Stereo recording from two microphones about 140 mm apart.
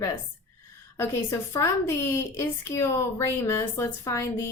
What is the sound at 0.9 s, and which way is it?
A woman's voice, 20° left (ahead or behind).